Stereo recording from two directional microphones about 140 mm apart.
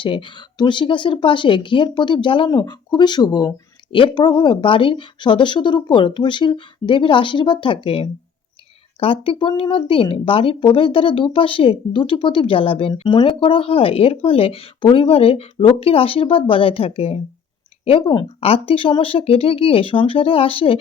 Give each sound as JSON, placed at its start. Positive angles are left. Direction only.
{"t": 0.0, "sound": "speech", "side_deg": 35}